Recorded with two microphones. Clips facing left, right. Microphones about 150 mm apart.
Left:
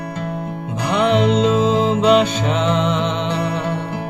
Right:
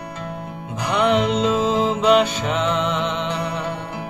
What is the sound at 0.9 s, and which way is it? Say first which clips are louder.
Music: left 3 dB; 30° left (ahead or behind).